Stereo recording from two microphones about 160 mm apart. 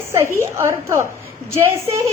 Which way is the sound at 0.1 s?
15° right (ahead or behind).